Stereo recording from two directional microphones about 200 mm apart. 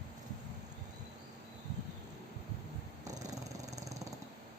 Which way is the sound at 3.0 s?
35° right (ahead or behind).